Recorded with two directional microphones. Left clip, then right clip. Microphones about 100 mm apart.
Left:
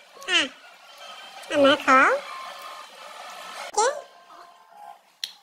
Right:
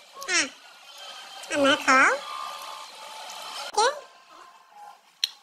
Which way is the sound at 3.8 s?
50° left (ahead or behind).